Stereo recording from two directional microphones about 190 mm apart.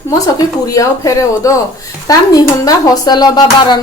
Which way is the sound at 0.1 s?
15° left (ahead or behind).